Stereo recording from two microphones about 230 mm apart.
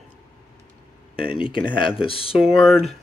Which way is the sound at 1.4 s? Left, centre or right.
Left.